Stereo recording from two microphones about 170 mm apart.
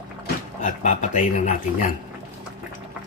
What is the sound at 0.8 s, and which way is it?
Speech, 45° left (ahead or behind).